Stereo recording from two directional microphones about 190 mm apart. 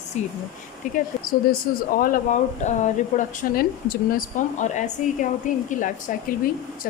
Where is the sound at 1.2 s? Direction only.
50° left (ahead or behind).